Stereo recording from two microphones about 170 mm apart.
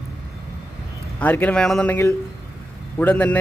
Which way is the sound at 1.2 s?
10° left (ahead or behind).